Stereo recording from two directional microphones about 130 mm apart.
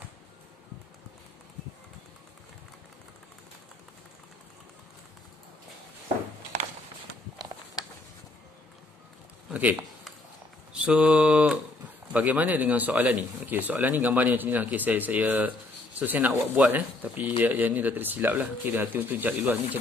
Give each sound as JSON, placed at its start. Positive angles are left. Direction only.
{"t": 7.8, "sound": "a sound", "side_deg": 30}
{"t": 9.5, "sound": "speech", "side_deg": -10}
{"t": 10.7, "sound": "mantra", "side_deg": -10}
{"t": 12.1, "sound": "speech", "side_deg": -10}